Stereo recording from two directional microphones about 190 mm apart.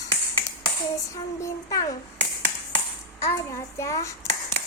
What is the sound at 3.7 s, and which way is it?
Speech, 15° left (ahead or behind).